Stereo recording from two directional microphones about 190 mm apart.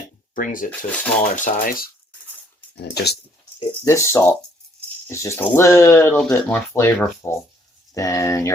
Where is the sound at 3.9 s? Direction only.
15° left (ahead or behind).